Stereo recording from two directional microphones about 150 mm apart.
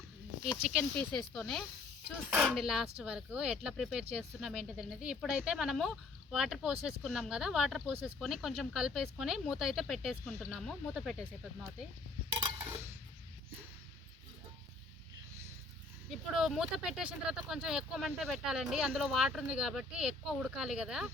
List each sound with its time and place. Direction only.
0.6 s speech: 5° right (ahead or behind)
0.9 s speech: 5° left (ahead or behind)
12.5 s a sound: 15° right (ahead or behind)
16.4 s speech: 5° right (ahead or behind)